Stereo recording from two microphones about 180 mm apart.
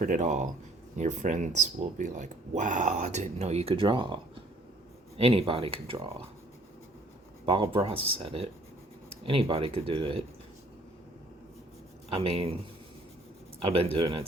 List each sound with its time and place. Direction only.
0.0 s speech: 45° right (ahead or behind)
7.5 s speech: 30° right (ahead or behind)
12.1 s speech: 35° right (ahead or behind)
13.7 s speech: 35° right (ahead or behind)